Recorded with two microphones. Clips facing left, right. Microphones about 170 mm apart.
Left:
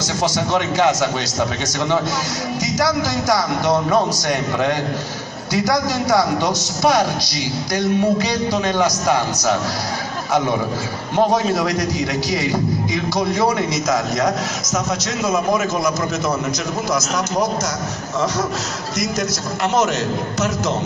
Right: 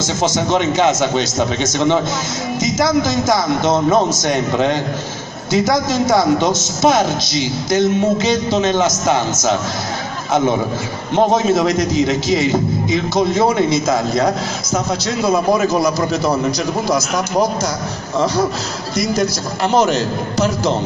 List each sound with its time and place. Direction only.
0.0 s a man's voice: 20° right (ahead or behind)
11.1 s a man's voice: 25° right (ahead or behind)
18.9 s a man's voice: 30° right (ahead or behind)